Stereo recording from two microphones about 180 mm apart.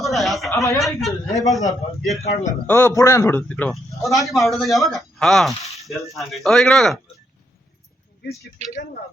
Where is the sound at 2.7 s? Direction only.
15° left (ahead or behind).